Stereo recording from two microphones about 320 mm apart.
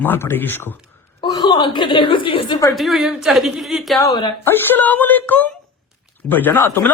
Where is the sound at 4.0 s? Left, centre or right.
Centre.